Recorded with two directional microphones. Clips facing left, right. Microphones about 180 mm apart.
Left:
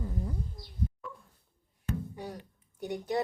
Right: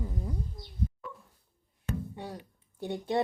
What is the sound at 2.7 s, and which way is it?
Speech, 25° right (ahead or behind).